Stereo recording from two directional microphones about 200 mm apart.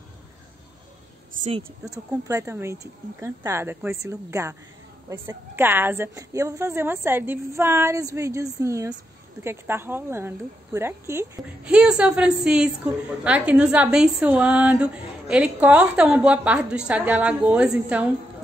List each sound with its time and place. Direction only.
1.4 s a woman's voice: 30° right (ahead or behind)
1.9 s a woman's voice: 15° right (ahead or behind)